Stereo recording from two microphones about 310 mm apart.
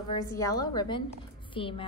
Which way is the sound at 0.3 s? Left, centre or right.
Centre.